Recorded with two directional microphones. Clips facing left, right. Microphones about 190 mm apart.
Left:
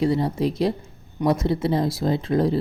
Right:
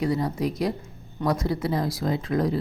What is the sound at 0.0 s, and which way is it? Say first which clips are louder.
A woman's voice: left 4 dB; 30° left (ahead or behind).